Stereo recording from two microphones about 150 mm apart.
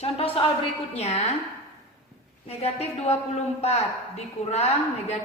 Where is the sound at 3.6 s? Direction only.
45° left (ahead or behind).